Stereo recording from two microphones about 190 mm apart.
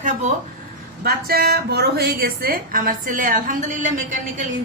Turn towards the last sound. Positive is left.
turn(degrees=-40)  # may be behind; listen again after turning